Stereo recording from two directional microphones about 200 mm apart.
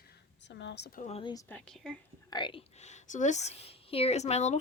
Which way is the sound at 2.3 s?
25° left (ahead or behind).